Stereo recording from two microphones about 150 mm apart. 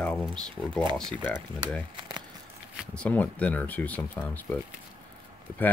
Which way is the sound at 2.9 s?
10° left (ahead or behind).